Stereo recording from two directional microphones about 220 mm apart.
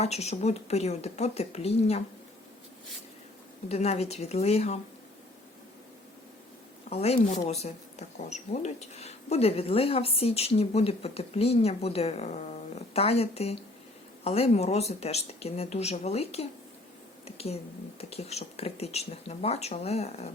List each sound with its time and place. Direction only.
0.0 s speech: 30° left (ahead or behind)
3.7 s speech: 30° left (ahead or behind)
6.9 s speech: 30° left (ahead or behind)